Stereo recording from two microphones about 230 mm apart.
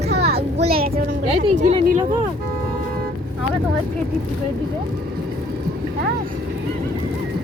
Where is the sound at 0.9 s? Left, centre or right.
Right.